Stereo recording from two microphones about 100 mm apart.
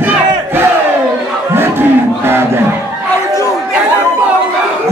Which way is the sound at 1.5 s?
25° right (ahead or behind).